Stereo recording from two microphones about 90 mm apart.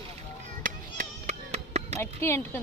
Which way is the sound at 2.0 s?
25° left (ahead or behind).